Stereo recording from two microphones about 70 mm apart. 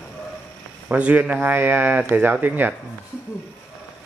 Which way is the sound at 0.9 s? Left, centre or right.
Right.